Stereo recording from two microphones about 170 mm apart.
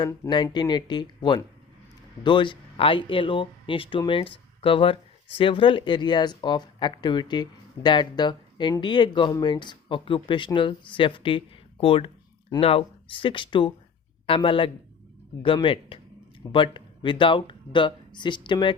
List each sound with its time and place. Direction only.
0.0 s speech: 25° left (ahead or behind)